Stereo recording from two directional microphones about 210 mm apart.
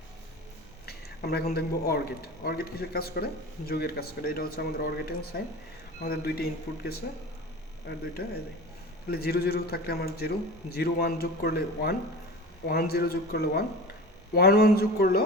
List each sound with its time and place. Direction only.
0.9 s a sound: 50° left (ahead or behind)
1.5 s a man's voice: 45° left (ahead or behind)
8.2 s a man's voice: 45° left (ahead or behind)